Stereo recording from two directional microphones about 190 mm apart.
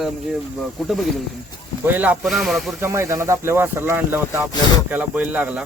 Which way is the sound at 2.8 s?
15° right (ahead or behind).